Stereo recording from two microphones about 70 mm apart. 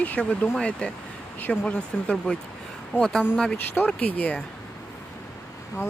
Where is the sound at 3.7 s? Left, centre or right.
Left.